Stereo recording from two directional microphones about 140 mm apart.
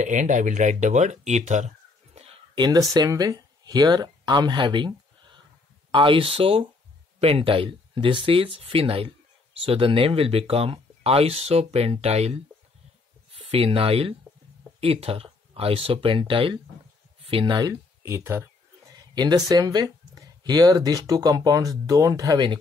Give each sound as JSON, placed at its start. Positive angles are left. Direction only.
{"t": 0.0, "sound": "speech", "side_deg": -60}
{"t": 2.5, "sound": "speech", "side_deg": -30}
{"t": 18.0, "sound": "speech", "side_deg": -15}
{"t": 18.9, "sound": "speech", "side_deg": -30}